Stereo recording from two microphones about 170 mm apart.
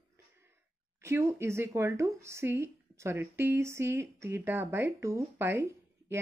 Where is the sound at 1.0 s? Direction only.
15° right (ahead or behind).